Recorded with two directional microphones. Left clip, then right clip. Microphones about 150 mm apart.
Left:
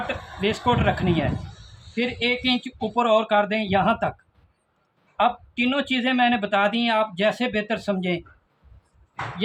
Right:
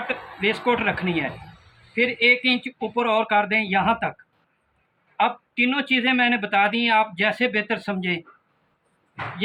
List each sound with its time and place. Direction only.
0.1 s speech: 70° left (ahead or behind)
2.0 s speech: 85° left
5.1 s speech: 70° left (ahead or behind); by 8.1 s 90° left